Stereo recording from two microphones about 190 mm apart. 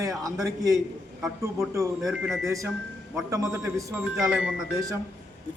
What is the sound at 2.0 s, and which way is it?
Speech, 5° right (ahead or behind).